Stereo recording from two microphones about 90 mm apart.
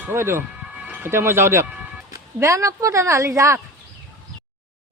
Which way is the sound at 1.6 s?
15° right (ahead or behind).